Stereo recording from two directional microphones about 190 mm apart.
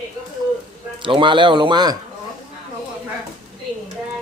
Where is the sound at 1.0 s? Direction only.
25° right (ahead or behind).